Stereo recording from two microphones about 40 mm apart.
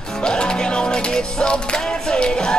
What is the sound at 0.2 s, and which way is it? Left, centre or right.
Music, left.